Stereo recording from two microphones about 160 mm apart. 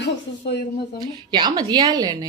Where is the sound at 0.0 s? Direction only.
90° left.